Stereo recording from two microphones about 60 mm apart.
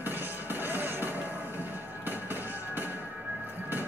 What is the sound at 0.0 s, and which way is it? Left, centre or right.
Music, right.